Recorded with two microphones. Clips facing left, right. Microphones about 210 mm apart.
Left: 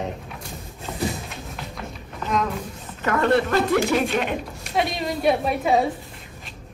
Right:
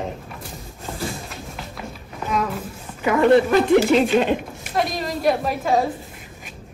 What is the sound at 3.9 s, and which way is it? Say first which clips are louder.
Speech: right 5 dB; 30° right (ahead or behind).